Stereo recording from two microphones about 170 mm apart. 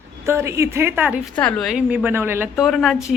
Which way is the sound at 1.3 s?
10° left (ahead or behind).